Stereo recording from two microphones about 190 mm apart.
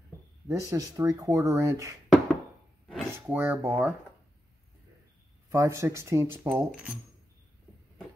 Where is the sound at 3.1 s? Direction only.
10° right (ahead or behind).